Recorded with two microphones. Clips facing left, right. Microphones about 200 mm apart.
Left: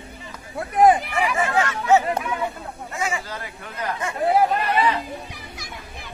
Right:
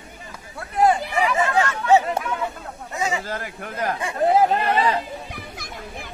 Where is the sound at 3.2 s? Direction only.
50° right (ahead or behind).